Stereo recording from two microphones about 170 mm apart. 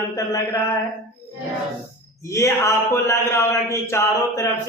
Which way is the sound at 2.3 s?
15° left (ahead or behind).